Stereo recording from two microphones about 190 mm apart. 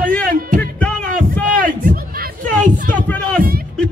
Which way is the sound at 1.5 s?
45° right (ahead or behind).